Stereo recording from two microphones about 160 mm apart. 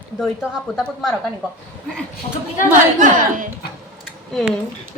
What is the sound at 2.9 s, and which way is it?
Speech, 55° right (ahead or behind).